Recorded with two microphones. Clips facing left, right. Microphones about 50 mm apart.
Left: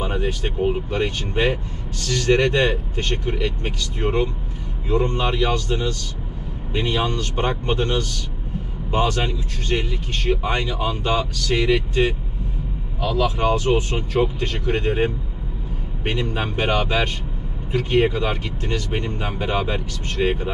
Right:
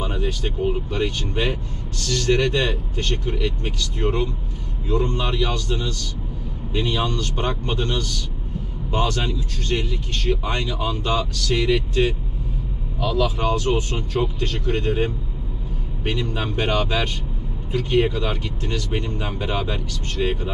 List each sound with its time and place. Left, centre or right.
0.0 s speech: centre